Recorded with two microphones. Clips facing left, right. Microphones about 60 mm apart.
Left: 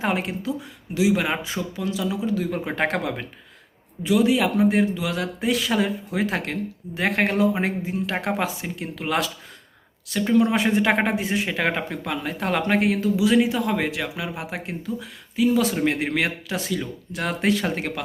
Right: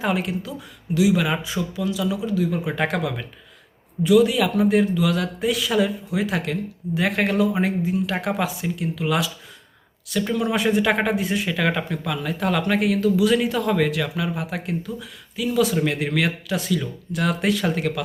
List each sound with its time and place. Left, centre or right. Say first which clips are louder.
0.0 s speech: right 1 dB; left
13.1 s speech: even; left